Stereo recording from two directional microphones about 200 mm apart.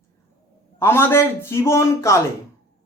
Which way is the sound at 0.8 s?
10° left (ahead or behind).